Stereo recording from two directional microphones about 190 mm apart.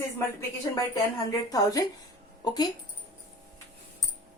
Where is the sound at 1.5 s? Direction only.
20° left (ahead or behind).